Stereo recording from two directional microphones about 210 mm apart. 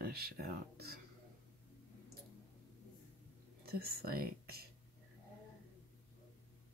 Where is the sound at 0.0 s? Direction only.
50° right (ahead or behind).